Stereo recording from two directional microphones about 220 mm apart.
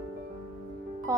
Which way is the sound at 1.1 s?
15° right (ahead or behind).